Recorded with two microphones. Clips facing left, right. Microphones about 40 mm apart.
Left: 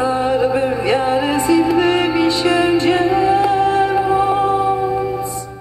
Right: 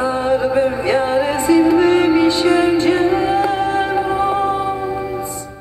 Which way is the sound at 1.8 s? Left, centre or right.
Centre.